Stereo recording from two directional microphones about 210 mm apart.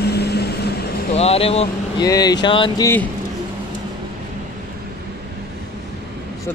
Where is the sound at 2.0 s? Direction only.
15° left (ahead or behind).